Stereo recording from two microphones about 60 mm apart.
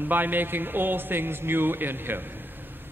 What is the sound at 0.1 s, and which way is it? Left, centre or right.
A man's voice, right.